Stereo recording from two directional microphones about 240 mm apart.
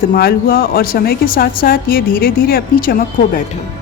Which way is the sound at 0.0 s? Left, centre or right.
Left.